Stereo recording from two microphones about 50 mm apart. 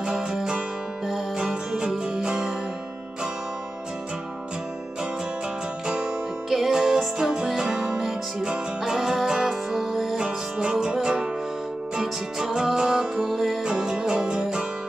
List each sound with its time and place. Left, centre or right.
0.0 s music: centre
6.5 s music: centre
10.1 s music: centre